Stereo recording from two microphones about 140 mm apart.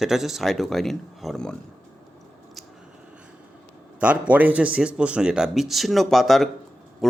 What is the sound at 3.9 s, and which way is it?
A man's voice, 10° right (ahead or behind).